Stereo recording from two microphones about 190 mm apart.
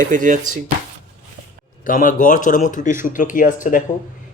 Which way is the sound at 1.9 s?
45° left (ahead or behind).